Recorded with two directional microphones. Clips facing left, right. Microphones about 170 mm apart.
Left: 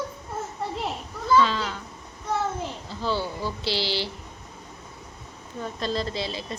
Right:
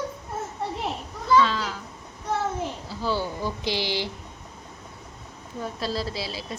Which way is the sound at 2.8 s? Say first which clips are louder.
Left 1 dB; 10° right (ahead or behind).